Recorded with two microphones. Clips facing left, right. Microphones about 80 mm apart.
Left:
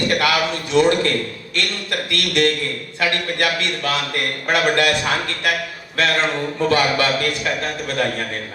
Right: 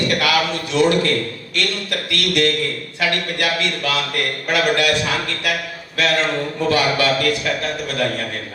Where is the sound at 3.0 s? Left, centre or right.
Left.